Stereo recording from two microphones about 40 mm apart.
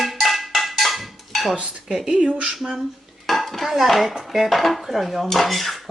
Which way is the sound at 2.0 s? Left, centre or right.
Right.